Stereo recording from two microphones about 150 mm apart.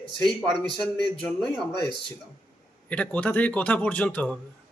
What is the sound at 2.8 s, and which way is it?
A man's voice, 10° left (ahead or behind).